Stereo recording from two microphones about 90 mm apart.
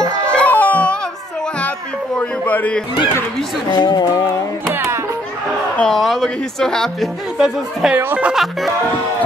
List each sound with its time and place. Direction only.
0.0 s a sound: 10° left (ahead or behind)
2.1 s a sound: 15° left (ahead or behind)
3.7 s speech: 50° left (ahead or behind)
4.7 s music: 30° right (ahead or behind)
5.8 s speech: 5° left (ahead or behind)
7.3 s speech: 5° right (ahead or behind)
7.9 s speech: 20° right (ahead or behind)
8.3 s speech: centre (ahead or behind)